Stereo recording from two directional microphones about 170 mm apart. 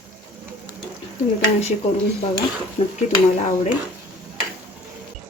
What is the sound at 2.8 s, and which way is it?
Speech, 35° left (ahead or behind).